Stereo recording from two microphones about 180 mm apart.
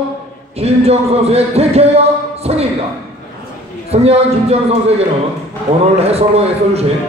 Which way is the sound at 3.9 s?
35° right (ahead or behind).